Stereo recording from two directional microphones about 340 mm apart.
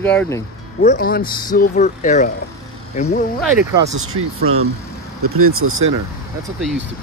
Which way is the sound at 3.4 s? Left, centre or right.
Centre.